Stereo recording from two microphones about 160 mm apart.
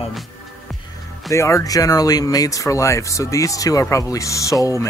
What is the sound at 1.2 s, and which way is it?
Speech, 20° left (ahead or behind).